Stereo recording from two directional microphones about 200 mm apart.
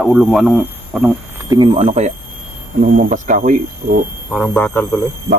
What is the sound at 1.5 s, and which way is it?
Speech, 25° right (ahead or behind).